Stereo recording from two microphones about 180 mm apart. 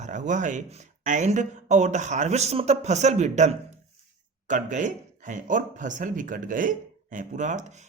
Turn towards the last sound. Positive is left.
turn(degrees=-40)  # may be behind; listen again after turning